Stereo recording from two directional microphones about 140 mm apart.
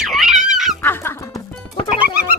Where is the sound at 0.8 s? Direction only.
15° left (ahead or behind).